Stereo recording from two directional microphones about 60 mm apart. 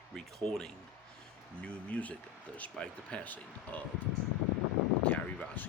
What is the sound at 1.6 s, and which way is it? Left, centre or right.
Speech, left.